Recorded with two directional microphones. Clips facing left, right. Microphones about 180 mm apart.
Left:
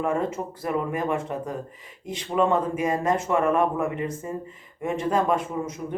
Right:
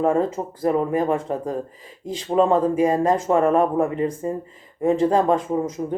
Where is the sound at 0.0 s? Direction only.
30° right (ahead or behind).